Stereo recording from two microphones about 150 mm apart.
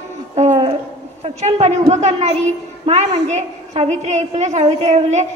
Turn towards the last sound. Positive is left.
turn(degrees=-50)  # may be behind; listen again after turning